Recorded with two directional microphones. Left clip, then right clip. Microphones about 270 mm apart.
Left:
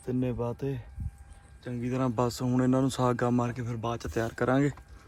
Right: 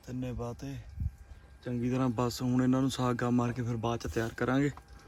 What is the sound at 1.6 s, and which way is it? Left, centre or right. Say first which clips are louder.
Speech: left 1 dB; centre.